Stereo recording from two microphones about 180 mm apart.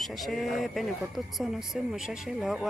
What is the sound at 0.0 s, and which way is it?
Speech, centre (ahead or behind).